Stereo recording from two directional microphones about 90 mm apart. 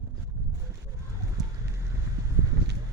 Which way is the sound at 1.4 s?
45° right (ahead or behind).